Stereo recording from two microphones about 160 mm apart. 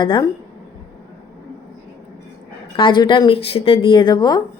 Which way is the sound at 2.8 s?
30° left (ahead or behind).